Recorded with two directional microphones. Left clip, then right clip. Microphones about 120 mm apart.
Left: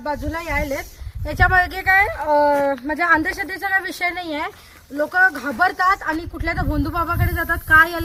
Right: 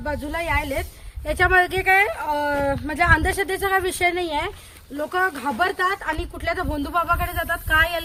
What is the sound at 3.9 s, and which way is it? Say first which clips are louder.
Speech: right 2 dB; 55° right (ahead or behind).